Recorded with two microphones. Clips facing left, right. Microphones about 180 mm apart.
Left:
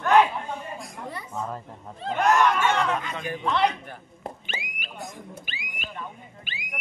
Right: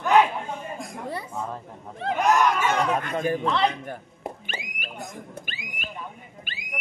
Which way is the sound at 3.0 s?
50° right (ahead or behind).